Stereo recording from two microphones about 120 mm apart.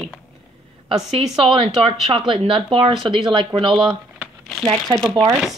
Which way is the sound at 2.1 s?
50° right (ahead or behind).